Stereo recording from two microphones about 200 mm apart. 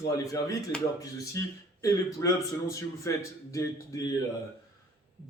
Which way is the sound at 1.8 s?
15° left (ahead or behind).